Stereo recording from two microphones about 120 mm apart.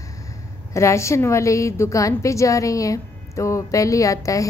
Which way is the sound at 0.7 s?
25° left (ahead or behind).